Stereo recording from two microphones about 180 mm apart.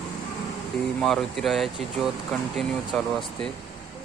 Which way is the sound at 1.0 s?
Centre (ahead or behind).